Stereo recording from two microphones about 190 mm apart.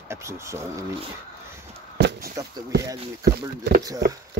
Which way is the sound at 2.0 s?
55° right (ahead or behind).